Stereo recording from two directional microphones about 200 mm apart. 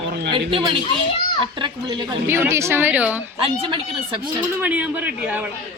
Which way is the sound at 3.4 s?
25° right (ahead or behind).